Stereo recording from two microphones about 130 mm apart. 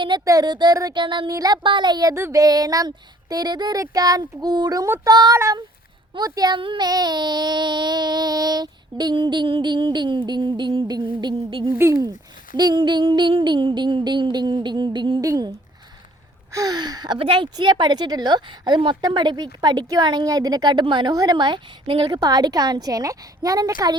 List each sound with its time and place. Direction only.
0.3 s a woman's voice: 30° right (ahead or behind)
11.8 s speech: 20° right (ahead or behind)
12.5 s a woman's voice: 35° right (ahead or behind)